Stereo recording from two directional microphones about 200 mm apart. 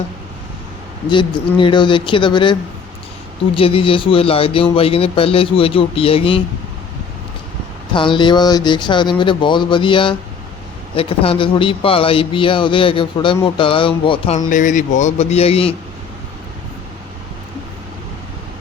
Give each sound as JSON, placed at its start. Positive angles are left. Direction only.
{"t": 1.1, "sound": "speech", "side_deg": 25}
{"t": 7.9, "sound": "speech", "side_deg": 25}